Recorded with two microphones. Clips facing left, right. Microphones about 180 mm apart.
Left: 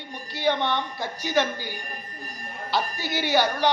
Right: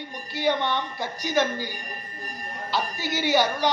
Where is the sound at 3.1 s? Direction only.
15° right (ahead or behind).